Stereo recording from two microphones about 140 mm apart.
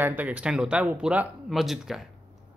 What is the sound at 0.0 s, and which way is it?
A man's voice, 10° right (ahead or behind).